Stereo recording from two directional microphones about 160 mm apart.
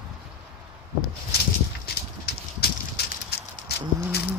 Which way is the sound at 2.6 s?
90° left.